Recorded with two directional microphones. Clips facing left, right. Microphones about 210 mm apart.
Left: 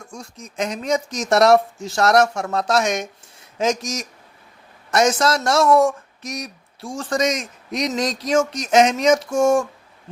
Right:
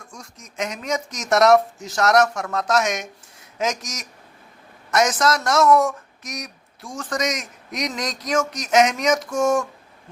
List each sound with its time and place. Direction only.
0.1 s speech: 30° left (ahead or behind)